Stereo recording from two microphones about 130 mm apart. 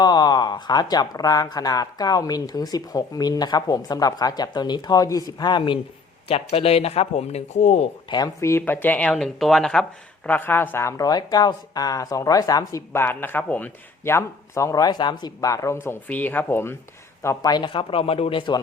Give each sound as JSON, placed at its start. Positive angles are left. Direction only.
{"t": 0.0, "sound": "speech", "side_deg": 30}
{"t": 6.2, "sound": "speech", "side_deg": 50}
{"t": 8.1, "sound": "speech", "side_deg": 25}
{"t": 17.2, "sound": "speech", "side_deg": 30}